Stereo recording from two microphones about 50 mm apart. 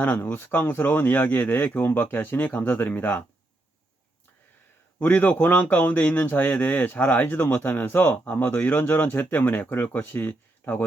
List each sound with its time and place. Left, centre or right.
0.0 s speech: left
4.9 s speech: left